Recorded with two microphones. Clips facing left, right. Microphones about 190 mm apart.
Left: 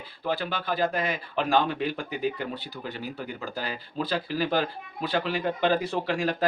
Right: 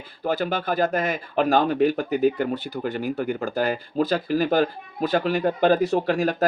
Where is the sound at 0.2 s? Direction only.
45° right (ahead or behind).